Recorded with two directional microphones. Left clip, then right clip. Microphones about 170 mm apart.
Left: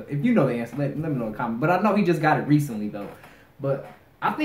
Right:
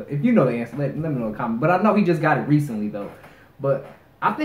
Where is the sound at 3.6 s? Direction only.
10° left (ahead or behind).